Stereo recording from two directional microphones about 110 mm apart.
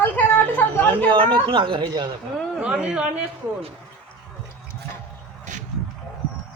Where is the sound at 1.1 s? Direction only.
50° right (ahead or behind).